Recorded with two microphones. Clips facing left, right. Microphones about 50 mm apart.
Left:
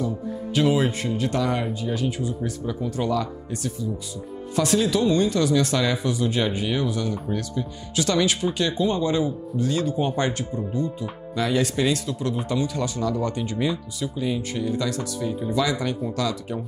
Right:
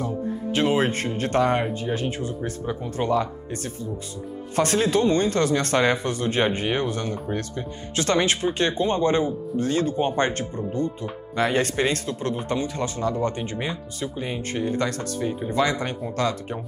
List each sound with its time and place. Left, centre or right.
0.6 s speech: right